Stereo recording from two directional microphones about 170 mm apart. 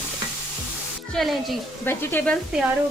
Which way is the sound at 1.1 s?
Centre (ahead or behind).